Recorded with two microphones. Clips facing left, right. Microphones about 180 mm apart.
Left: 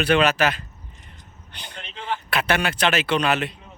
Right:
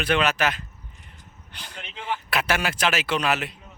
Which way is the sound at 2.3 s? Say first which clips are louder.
Left 3 dB; 5° right (ahead or behind).